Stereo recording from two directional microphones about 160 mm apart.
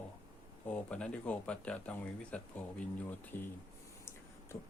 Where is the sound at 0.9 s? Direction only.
5° left (ahead or behind).